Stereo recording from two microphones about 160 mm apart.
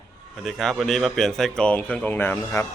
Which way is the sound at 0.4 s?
5° left (ahead or behind).